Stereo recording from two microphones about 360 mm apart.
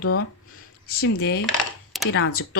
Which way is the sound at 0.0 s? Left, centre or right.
Left.